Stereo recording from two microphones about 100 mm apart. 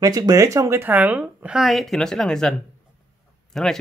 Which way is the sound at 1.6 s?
Centre (ahead or behind).